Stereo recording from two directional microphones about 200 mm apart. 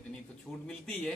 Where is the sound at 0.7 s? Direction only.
5° left (ahead or behind).